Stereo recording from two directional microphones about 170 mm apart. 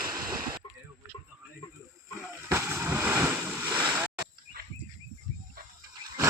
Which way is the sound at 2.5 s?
15° right (ahead or behind).